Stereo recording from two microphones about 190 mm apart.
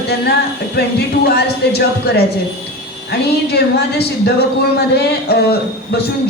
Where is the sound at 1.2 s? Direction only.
55° left (ahead or behind).